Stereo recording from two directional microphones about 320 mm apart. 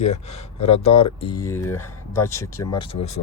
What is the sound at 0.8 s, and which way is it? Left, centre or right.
Speech, centre.